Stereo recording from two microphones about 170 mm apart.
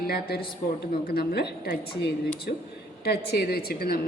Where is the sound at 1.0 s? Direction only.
65° left (ahead or behind).